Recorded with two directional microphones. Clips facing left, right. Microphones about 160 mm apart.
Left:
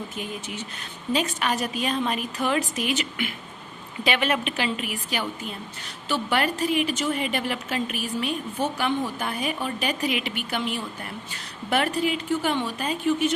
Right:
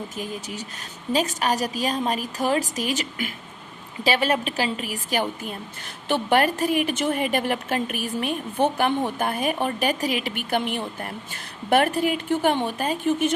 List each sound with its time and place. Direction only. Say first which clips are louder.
0.2 s a woman's voice: right 2 dB; 40° right (ahead or behind)